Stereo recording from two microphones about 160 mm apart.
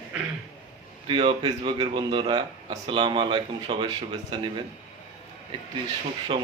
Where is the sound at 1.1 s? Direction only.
30° right (ahead or behind).